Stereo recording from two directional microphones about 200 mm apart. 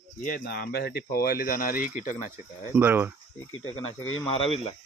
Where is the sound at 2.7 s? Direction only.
10° right (ahead or behind).